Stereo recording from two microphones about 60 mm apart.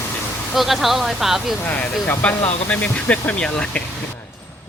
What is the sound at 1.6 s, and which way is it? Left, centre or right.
Speech, left.